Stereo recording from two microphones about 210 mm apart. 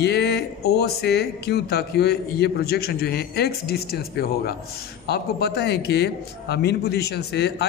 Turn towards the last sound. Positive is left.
turn(degrees=50)  # may be behind; listen again after turning